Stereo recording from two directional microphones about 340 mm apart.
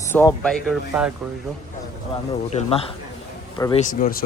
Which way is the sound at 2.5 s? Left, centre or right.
Centre.